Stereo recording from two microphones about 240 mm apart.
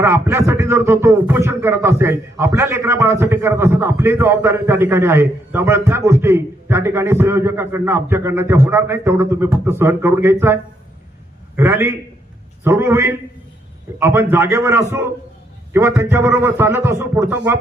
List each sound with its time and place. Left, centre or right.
0.0 s speech: centre